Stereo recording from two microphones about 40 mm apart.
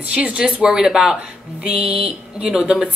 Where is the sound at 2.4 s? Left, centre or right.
Centre.